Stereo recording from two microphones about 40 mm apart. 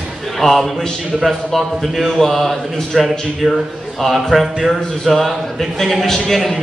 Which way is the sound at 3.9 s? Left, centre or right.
Centre.